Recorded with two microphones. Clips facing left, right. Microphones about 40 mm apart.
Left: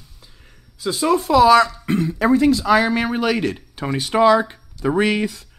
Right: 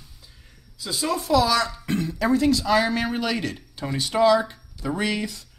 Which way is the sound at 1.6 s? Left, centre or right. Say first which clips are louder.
Left 5 dB; centre.